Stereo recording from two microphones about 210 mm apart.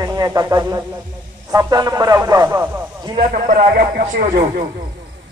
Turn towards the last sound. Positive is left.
turn(degrees=-35)  # may be behind; listen again after turning